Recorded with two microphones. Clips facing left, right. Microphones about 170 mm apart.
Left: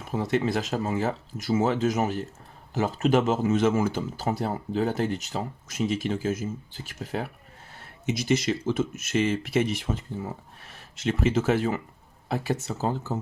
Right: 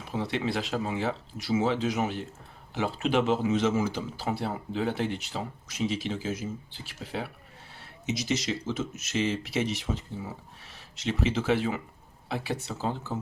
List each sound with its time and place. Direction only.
0.0 s speech: 45° left (ahead or behind)